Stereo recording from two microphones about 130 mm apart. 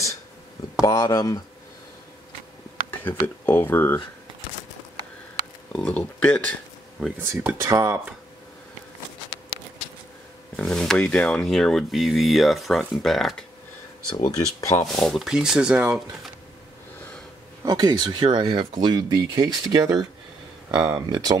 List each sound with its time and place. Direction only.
0.7 s speech: 25° left (ahead or behind)
3.0 s speech: 15° left (ahead or behind)
5.7 s speech: 5° left (ahead or behind)
7.6 s speech: 20° right (ahead or behind)
10.5 s speech: 5° left (ahead or behind)
14.1 s speech: 30° left (ahead or behind)
15.0 s speech: centre (ahead or behind)
17.6 s speech: 30° right (ahead or behind)